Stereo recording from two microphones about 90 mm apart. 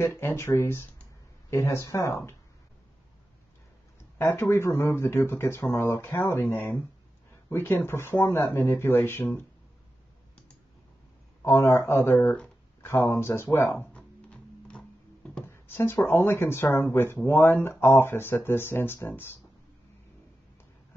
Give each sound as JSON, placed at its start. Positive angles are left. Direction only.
{"t": 0.0, "sound": "speech", "side_deg": 30}
{"t": 4.2, "sound": "speech", "side_deg": 30}
{"t": 11.4, "sound": "speech", "side_deg": 30}
{"t": 13.9, "sound": "music", "side_deg": 15}
{"t": 15.4, "sound": "speech", "side_deg": 25}